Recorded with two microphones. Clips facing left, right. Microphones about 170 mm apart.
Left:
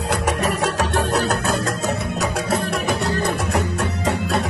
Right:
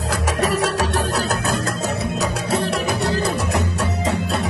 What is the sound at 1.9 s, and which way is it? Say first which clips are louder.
Music: even; 65° left (ahead or behind).